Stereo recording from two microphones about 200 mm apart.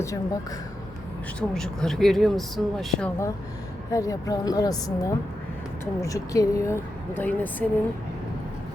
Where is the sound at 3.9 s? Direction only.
15° left (ahead or behind).